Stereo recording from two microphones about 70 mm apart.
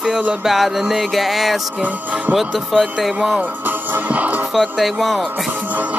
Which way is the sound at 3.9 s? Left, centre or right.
Right.